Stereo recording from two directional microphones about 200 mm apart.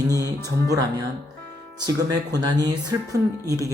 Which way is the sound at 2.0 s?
20° right (ahead or behind).